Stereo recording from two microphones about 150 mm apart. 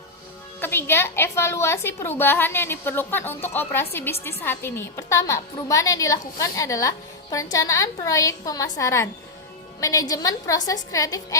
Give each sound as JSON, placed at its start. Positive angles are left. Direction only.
{"t": 0.6, "sound": "a woman's voice", "side_deg": 15}